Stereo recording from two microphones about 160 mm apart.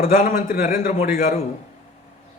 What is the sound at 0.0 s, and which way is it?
Speech, 60° left (ahead or behind).